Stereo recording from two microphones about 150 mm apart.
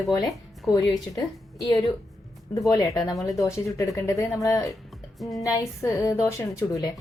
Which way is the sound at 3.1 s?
Centre (ahead or behind).